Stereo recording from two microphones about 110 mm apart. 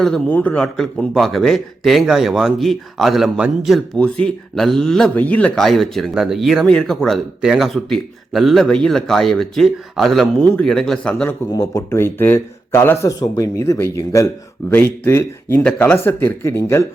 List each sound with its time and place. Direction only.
0.3 s a man's voice: 15° left (ahead or behind); by 3.8 s centre (ahead or behind)
3.9 s a man's voice: 10° left (ahead or behind)
11.1 s speech: 15° left (ahead or behind)
11.5 s speech: 25° left (ahead or behind)